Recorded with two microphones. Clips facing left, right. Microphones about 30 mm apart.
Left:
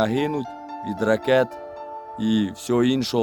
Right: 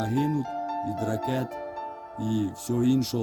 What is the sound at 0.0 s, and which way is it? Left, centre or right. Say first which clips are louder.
Speech: left 4 dB; left.